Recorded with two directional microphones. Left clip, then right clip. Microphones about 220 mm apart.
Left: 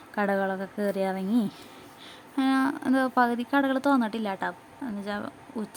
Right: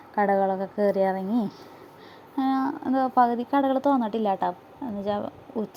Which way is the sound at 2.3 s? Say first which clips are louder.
Even; 25° left (ahead or behind).